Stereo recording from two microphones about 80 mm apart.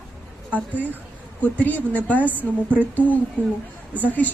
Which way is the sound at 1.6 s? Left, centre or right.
Left.